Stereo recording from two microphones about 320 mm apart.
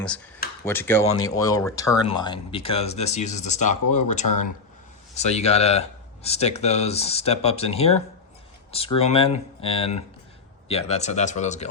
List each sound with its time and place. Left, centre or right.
0.6 s speech: centre